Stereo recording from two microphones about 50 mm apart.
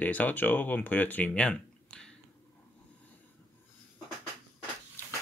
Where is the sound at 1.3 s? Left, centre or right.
Centre.